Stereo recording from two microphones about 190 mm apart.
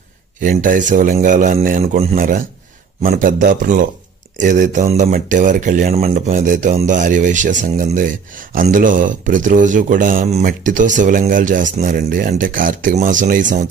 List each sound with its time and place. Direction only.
0.4 s speech: 45° right (ahead or behind)
1.8 s speech: 35° right (ahead or behind)
2.1 s speech: 50° right (ahead or behind)